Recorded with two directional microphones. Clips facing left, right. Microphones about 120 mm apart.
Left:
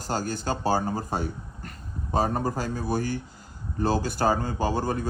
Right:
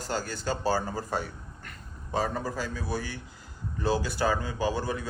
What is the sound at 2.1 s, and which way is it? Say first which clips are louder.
A man's voice: left 4 dB; 50° left (ahead or behind).